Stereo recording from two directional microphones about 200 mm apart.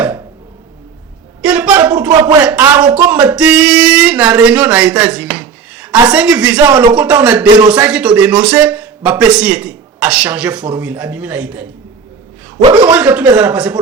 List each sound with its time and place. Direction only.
1.4 s a sound: 5° right (ahead or behind)
2.0 s a man's voice: 20° right (ahead or behind)
2.4 s speech: 10° right (ahead or behind)
4.4 s a sound: 5° right (ahead or behind)
6.1 s speech: 5° right (ahead or behind)
6.7 s speech: 20° right (ahead or behind)
6.9 s a man's voice: 5° right (ahead or behind)
7.4 s speech: 25° right (ahead or behind)
7.7 s a man's voice: 5° right (ahead or behind)
12.6 s speech: 25° right (ahead or behind)
12.9 s a man's voice: 5° right (ahead or behind)